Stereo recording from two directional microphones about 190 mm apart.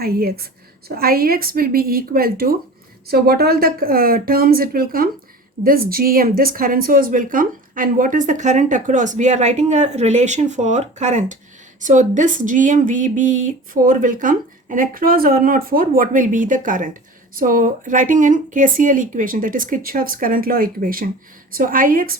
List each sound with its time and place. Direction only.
0.0 s a woman's voice: 55° right (ahead or behind)